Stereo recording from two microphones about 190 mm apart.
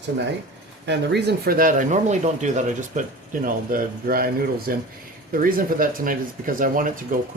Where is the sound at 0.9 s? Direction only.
65° right (ahead or behind).